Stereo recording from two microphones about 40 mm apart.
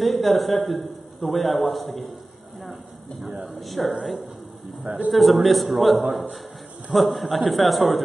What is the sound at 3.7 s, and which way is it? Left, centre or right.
Speech, centre.